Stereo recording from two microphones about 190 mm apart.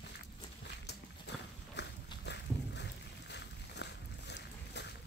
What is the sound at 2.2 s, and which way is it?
Boat, 65° left (ahead or behind).